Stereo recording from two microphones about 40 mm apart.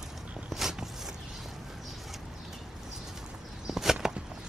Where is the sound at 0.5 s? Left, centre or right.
Centre.